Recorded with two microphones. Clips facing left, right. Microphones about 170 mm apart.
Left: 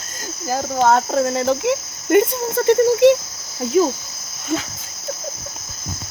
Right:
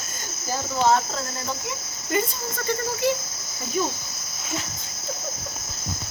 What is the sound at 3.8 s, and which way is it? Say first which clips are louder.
Speech: left 10 dB; 85° left.